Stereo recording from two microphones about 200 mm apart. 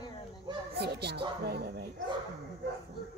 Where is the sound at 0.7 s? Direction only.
55° right (ahead or behind).